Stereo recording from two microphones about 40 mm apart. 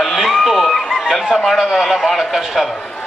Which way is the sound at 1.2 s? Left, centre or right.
Centre.